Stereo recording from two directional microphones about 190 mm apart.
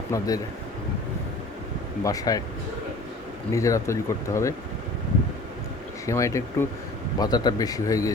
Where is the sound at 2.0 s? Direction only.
20° left (ahead or behind).